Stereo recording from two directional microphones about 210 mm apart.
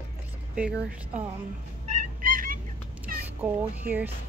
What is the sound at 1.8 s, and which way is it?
Fowl, 40° right (ahead or behind).